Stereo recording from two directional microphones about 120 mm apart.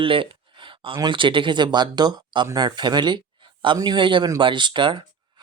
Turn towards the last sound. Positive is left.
turn(degrees=-40)  # may be behind; listen again after turning